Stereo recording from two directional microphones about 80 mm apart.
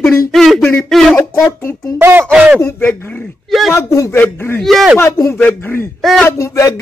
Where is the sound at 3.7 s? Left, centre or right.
Left.